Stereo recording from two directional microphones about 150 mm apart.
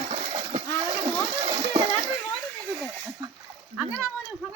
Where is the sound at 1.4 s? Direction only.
40° right (ahead or behind).